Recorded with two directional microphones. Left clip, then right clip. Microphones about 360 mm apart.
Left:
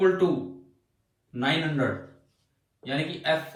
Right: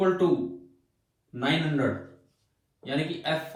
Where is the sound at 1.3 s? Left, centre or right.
Centre.